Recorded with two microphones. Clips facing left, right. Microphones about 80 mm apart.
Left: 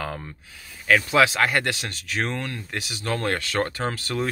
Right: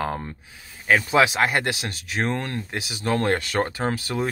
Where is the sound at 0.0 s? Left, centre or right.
Right.